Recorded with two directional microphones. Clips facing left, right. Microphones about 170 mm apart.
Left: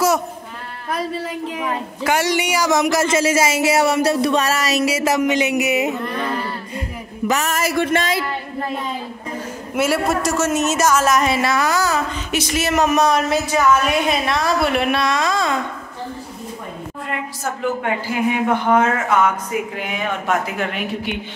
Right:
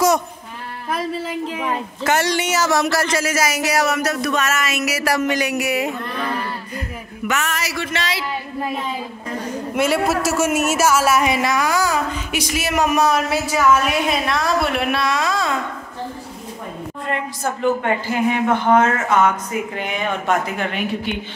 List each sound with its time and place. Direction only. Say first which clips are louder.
2.0 s speech: even; 10° left (ahead or behind)
7.2 s speech: left 4 dB; 40° left (ahead or behind)
9.8 s speech: even; 5° left (ahead or behind)
10.2 s a woman's voice: even; 10° right (ahead or behind)
17.8 s speech: right 1 dB; 10° left (ahead or behind)